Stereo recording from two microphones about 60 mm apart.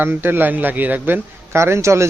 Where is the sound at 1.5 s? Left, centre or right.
Right.